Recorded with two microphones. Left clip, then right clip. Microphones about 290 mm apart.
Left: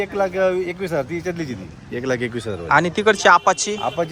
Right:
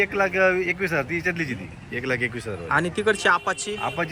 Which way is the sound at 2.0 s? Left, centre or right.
Left.